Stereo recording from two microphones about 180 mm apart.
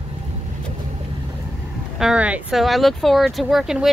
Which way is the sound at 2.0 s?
5° right (ahead or behind).